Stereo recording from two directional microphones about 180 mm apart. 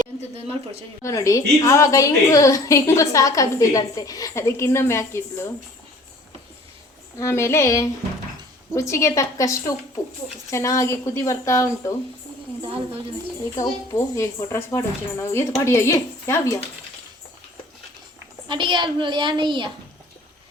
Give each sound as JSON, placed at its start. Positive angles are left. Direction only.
{"t": 0.3, "sound": "speech", "side_deg": -35}
{"t": 1.0, "sound": "a woman's voice", "side_deg": 15}
{"t": 7.2, "sound": "a woman's voice", "side_deg": 15}
{"t": 12.6, "sound": "speech", "side_deg": -30}
{"t": 13.6, "sound": "a woman's voice", "side_deg": 15}
{"t": 18.4, "sound": "a woman's voice", "side_deg": -25}